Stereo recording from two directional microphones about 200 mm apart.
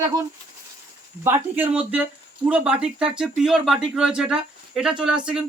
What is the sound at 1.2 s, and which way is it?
Speech, 10° right (ahead or behind).